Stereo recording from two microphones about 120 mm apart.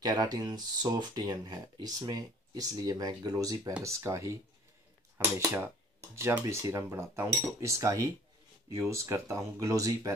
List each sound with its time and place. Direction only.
0.0 s speech: 35° right (ahead or behind)
3.8 s cutlery: 25° right (ahead or behind)
5.1 s speech: 25° right (ahead or behind)
6.1 s cutlery: 25° right (ahead or behind)